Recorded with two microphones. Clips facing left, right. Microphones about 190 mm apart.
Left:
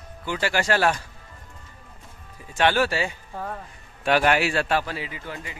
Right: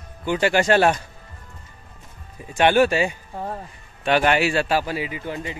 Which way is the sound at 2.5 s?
15° right (ahead or behind).